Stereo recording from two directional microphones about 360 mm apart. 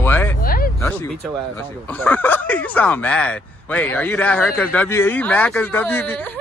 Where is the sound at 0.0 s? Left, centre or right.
Centre.